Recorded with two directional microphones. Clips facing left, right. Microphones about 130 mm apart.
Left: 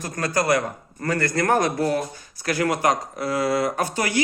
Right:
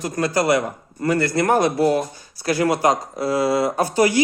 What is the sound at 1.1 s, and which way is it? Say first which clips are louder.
Speech: right 2 dB; 25° right (ahead or behind).